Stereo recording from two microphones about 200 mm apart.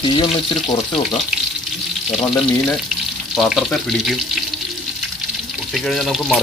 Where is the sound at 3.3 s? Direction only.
Centre (ahead or behind).